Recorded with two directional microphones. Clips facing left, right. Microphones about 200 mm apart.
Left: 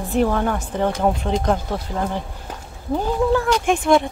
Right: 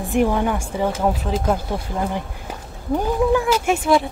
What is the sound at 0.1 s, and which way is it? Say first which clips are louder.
Speech: right 1 dB; 10° right (ahead or behind).